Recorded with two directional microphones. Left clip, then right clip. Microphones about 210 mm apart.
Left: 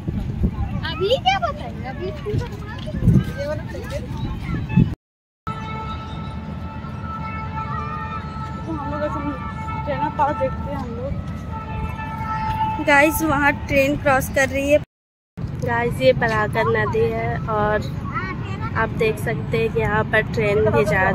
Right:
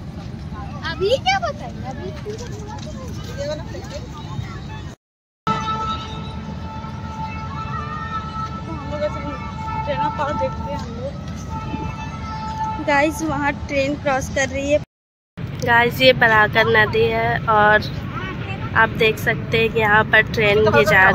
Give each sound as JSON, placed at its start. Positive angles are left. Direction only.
{"t": 0.8, "sound": "vehicle", "side_deg": 45}
{"t": 5.4, "sound": "music", "side_deg": -5}
{"t": 9.8, "sound": "vehicle", "side_deg": 50}
{"t": 12.8, "sound": "speech", "side_deg": 10}